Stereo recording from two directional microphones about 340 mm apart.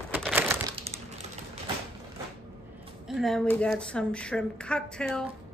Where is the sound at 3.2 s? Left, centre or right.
Centre.